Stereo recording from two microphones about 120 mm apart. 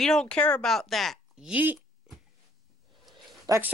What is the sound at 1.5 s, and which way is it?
Speech, 15° right (ahead or behind).